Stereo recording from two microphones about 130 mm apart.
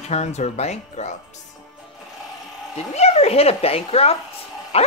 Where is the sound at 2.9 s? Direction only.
55° left (ahead or behind).